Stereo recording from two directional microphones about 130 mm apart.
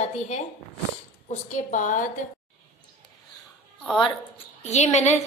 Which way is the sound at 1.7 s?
80° left.